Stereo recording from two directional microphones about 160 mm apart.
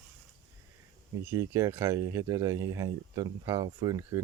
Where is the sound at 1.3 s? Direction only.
20° right (ahead or behind).